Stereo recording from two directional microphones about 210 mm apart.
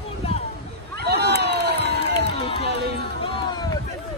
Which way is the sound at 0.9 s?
50° right (ahead or behind).